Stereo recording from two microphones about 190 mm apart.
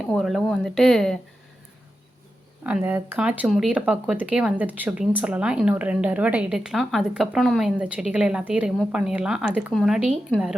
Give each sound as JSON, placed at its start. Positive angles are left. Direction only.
{"t": 0.0, "sound": "speech", "side_deg": 0}
{"t": 2.6, "sound": "speech", "side_deg": -10}